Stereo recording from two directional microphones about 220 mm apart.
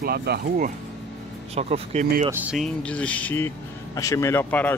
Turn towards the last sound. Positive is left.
turn(degrees=10)  # may be behind; listen again after turning